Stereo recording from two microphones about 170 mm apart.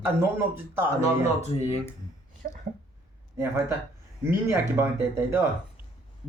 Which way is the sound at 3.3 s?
15° right (ahead or behind).